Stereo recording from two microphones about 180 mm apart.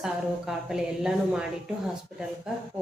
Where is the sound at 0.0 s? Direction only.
Centre (ahead or behind).